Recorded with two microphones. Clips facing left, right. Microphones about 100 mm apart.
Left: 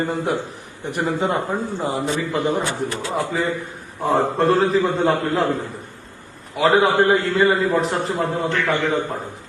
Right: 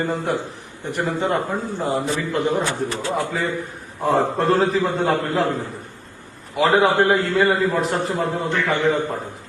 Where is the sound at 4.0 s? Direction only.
Centre (ahead or behind).